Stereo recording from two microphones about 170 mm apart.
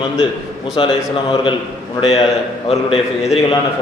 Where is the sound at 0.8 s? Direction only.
30° left (ahead or behind).